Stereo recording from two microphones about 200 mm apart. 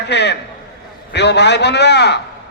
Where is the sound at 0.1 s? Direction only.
60° left (ahead or behind).